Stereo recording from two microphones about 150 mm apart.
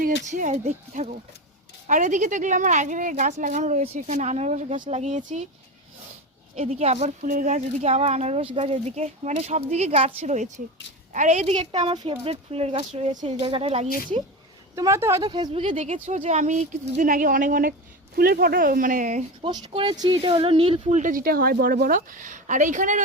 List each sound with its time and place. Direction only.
0.0 s speech: 60° right (ahead or behind)
6.6 s speech: 45° right (ahead or behind)
7.2 s speech: 65° right (ahead or behind)
13.4 s speech: 40° right (ahead or behind)
14.8 s speech: 20° right (ahead or behind)
15.2 s speech: 30° right (ahead or behind)
15.7 s speech: 55° right (ahead or behind)
18.2 s speech: 90° right; by 19.2 s 55° right (ahead or behind)
19.5 s speech: 30° right (ahead or behind)
21.0 s speech: 65° right (ahead or behind)